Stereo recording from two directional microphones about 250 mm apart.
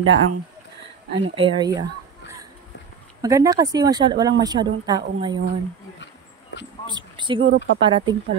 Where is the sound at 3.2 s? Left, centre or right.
Centre.